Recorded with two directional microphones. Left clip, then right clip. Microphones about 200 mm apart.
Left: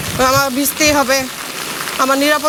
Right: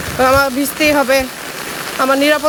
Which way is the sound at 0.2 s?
20° right (ahead or behind).